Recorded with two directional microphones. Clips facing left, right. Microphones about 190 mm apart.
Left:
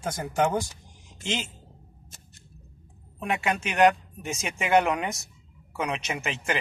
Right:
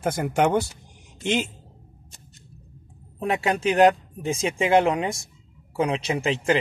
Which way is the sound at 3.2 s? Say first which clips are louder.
Right 5 dB; 35° right (ahead or behind).